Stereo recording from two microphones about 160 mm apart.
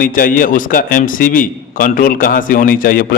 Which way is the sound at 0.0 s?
60° left (ahead or behind).